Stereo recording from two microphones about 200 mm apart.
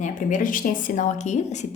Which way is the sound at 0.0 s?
40° left (ahead or behind).